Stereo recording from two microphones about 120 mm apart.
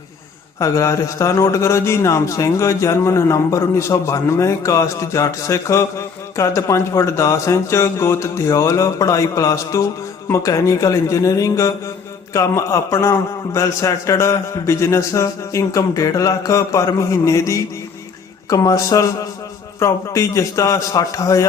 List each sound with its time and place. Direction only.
0.6 s a man's voice: 25° left (ahead or behind)